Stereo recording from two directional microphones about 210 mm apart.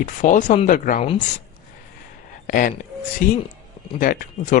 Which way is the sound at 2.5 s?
40° left (ahead or behind).